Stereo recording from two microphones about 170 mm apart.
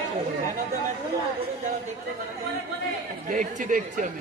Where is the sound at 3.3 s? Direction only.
50° right (ahead or behind).